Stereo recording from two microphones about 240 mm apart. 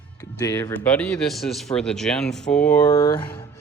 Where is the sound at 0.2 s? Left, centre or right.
Centre.